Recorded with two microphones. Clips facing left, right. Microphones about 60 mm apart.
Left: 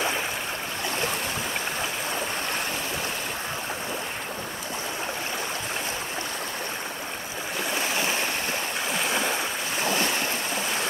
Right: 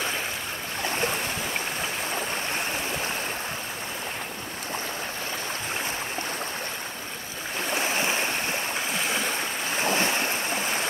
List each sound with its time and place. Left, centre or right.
7.7 s stream: right
8.9 s stream: centre
9.8 s waves: right